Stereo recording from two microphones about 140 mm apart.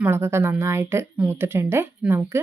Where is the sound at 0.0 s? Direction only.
15° right (ahead or behind).